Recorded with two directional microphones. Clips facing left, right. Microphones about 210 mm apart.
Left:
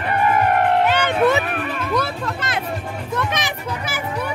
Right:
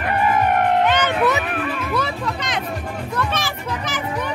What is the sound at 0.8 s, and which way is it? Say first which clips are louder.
Music: left 1 dB; 10° left (ahead or behind).